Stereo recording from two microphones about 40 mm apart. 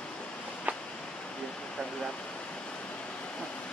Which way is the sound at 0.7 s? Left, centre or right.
Right.